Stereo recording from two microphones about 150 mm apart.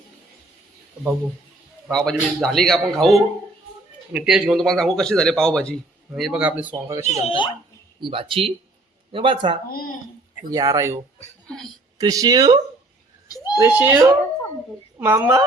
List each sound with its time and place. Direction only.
1.9 s speech: 5° left (ahead or behind)
6.7 s speech: 20° right (ahead or behind)
7.0 s speech: 50° left (ahead or behind)
8.0 s speech: 35° right (ahead or behind)
11.4 s speech: 5° left (ahead or behind)
11.9 s speech: 25° right (ahead or behind)
13.2 s a sound: 25° left (ahead or behind)
13.6 s speech: 15° right (ahead or behind)